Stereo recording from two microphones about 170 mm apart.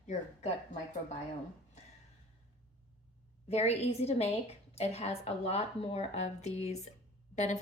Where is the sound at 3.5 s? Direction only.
40° left (ahead or behind).